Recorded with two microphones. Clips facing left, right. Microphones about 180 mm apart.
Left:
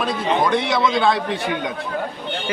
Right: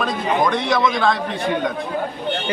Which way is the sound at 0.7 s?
25° left (ahead or behind).